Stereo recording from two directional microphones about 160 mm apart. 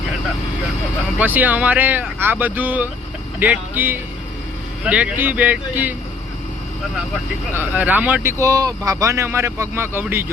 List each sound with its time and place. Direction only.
1.2 s speech: 10° right (ahead or behind)
7.5 s speech: 10° right (ahead or behind)